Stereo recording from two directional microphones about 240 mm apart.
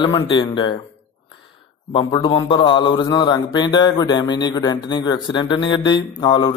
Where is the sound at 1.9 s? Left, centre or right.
Centre.